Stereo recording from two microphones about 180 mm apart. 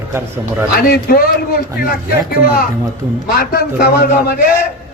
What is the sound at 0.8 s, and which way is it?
Speech, 55° left (ahead or behind).